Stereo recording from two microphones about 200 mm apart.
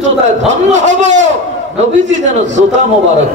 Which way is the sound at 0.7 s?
35° right (ahead or behind).